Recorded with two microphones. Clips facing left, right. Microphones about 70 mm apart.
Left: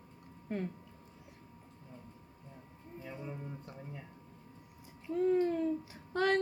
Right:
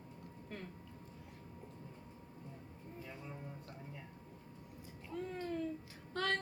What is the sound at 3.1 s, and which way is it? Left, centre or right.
Music, centre.